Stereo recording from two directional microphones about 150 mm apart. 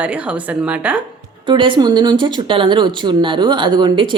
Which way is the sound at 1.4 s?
35° right (ahead or behind).